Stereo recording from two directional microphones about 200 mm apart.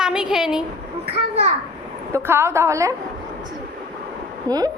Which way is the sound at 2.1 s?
10° right (ahead or behind).